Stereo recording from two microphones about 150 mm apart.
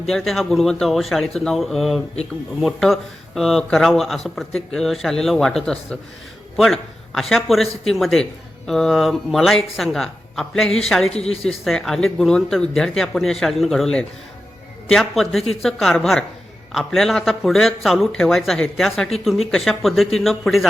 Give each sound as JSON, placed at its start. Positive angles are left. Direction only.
{"t": 0.0, "sound": "speech", "side_deg": 0}
{"t": 11.1, "sound": "speech", "side_deg": 45}
{"t": 11.4, "sound": "speech", "side_deg": 5}